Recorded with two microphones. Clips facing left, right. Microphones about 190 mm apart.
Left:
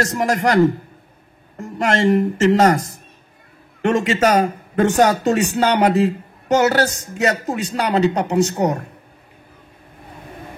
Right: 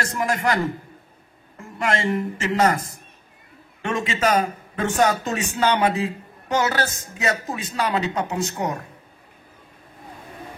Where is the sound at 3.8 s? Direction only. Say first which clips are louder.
Left 6 dB; 40° left (ahead or behind).